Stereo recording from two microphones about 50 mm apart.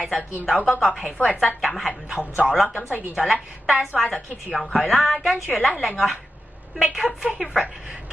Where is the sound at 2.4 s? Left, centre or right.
Centre.